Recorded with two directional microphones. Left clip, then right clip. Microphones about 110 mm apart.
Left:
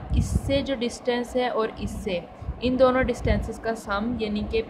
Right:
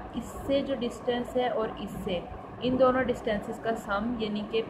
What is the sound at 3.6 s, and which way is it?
A woman's voice, 55° left (ahead or behind).